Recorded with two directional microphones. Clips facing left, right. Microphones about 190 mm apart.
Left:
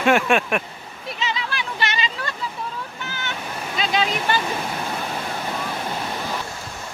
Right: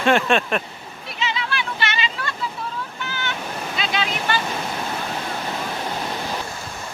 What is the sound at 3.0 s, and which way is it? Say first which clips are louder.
Waves: right 3 dB; 40° left (ahead or behind).